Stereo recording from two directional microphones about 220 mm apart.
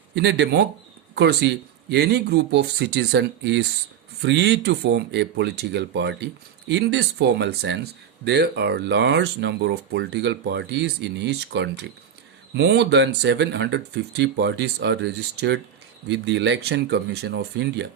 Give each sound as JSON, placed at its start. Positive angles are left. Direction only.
{"t": 0.1, "sound": "speech", "side_deg": -50}